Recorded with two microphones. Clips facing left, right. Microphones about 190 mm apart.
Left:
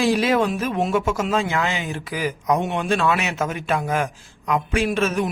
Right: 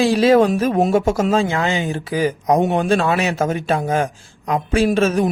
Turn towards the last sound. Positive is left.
turn(degrees=-35)  # may be behind; listen again after turning